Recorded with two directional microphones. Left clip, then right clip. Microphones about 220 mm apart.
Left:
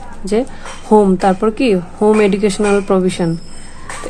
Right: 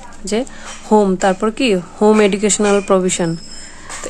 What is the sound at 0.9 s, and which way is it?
Speech, 5° right (ahead or behind).